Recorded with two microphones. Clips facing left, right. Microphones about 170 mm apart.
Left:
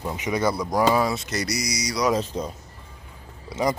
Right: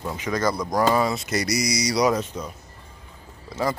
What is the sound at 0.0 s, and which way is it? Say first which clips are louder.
Speech: even; 15° left (ahead or behind).